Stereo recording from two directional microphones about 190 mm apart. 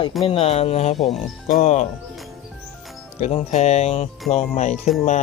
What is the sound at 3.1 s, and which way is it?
Speech, 35° left (ahead or behind).